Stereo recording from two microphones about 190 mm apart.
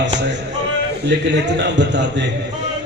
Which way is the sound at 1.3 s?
70° right (ahead or behind).